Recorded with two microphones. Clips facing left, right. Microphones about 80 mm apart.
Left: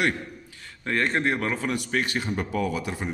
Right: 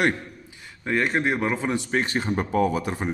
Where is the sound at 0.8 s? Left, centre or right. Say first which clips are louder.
Right 1 dB; centre.